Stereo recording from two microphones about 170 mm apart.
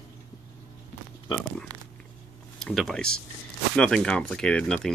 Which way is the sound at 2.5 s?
Centre (ahead or behind).